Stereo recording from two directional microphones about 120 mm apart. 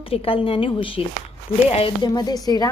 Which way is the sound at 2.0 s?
35° left (ahead or behind).